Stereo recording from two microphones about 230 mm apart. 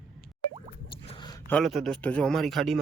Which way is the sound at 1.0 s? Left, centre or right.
Left.